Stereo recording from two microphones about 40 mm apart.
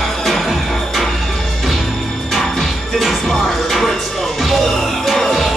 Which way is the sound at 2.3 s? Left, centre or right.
Centre.